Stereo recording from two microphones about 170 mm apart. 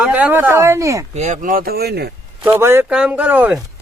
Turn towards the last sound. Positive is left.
turn(degrees=-10)  # may be behind; listen again after turning